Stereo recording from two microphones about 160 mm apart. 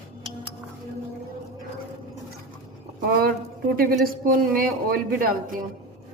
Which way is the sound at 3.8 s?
65° right (ahead or behind).